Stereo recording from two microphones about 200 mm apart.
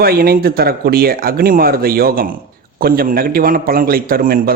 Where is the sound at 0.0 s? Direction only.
50° right (ahead or behind).